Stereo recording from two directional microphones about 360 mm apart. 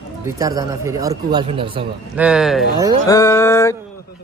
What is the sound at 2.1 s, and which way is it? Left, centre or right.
Speech, centre.